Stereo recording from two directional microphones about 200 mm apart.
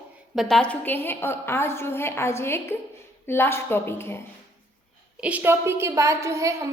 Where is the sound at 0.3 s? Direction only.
Centre (ahead or behind).